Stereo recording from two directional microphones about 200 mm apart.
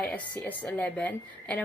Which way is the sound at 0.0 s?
10° left (ahead or behind).